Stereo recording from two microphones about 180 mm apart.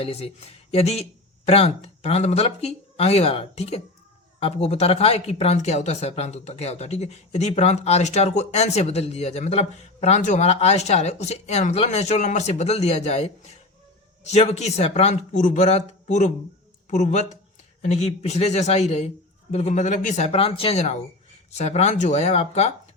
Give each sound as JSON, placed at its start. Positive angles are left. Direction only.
{"t": 0.0, "sound": "speech", "side_deg": 35}